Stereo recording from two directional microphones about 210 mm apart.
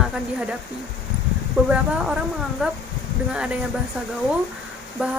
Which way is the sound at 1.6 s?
5° right (ahead or behind).